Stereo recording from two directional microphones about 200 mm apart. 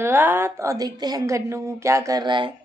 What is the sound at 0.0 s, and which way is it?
A woman's voice, 10° right (ahead or behind).